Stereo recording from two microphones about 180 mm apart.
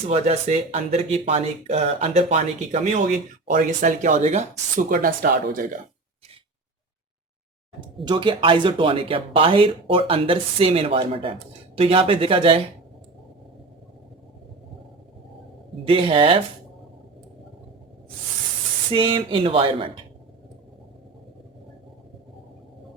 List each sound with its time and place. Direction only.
0.1 s speech: 35° right (ahead or behind); by 5.6 s 50° right (ahead or behind)
8.0 s speech: 25° right (ahead or behind)
15.8 s speech: 30° right (ahead or behind)
18.9 s speech: 30° right (ahead or behind)